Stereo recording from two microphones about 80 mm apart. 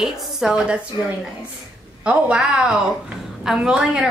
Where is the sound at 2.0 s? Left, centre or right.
Centre.